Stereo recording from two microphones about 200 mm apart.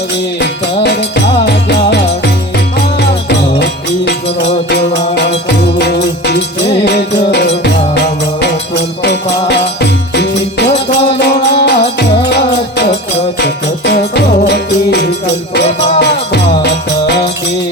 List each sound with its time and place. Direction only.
0.8 s music: 55° left (ahead or behind)
13.4 s music: 55° left (ahead or behind)